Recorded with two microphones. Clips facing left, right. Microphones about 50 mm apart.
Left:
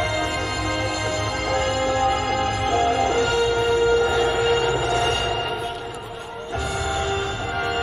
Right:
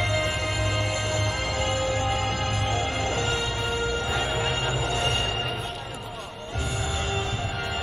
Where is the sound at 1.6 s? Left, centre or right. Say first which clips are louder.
Left 6 dB; centre.